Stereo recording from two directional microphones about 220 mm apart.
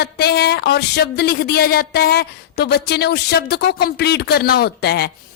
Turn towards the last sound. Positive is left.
turn(degrees=45)  # may be behind; listen again after turning